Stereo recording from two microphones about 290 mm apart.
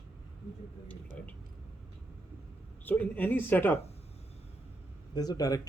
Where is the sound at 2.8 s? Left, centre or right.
Centre.